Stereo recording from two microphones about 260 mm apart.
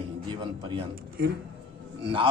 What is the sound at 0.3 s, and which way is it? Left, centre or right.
Speech, centre.